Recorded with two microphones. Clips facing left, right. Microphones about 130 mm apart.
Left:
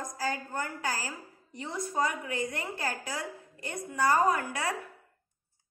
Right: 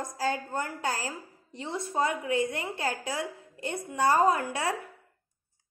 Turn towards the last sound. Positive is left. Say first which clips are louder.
# right 3 dB
turn(degrees=-25)  # may be behind; listen again after turning